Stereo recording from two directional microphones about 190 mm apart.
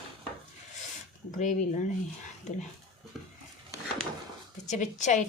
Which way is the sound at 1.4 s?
40° left (ahead or behind).